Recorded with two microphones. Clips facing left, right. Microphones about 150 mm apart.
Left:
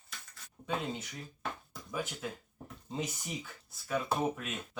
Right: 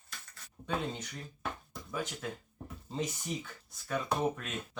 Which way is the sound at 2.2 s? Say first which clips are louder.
Even; 5° left (ahead or behind).